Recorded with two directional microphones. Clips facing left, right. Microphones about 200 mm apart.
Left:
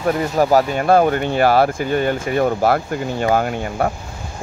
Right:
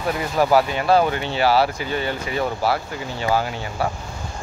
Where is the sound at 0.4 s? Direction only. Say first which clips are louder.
Left 1 dB; 45° left (ahead or behind).